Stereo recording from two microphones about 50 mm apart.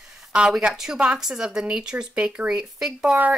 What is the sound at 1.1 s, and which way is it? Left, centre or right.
Speech, centre.